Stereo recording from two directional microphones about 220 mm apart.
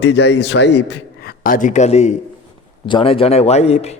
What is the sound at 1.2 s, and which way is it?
A man's voice, 40° left (ahead or behind).